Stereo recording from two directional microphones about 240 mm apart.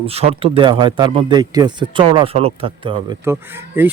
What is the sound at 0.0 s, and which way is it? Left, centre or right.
Speech, right.